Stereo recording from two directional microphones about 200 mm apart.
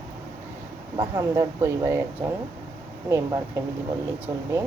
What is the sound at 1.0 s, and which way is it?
Speech, 20° right (ahead or behind).